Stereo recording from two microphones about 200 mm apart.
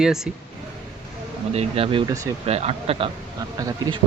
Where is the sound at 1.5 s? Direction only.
30° right (ahead or behind).